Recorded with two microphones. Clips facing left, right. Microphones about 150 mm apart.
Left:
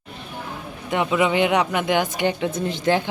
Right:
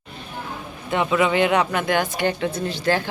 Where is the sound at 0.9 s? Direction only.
10° left (ahead or behind).